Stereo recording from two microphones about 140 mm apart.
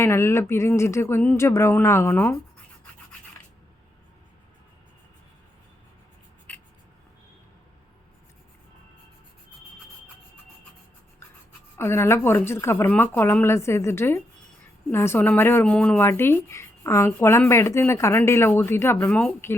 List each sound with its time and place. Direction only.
0.0 s speech: 20° left (ahead or behind)
6.5 s writing: 10° left (ahead or behind)
11.8 s speech: 15° left (ahead or behind)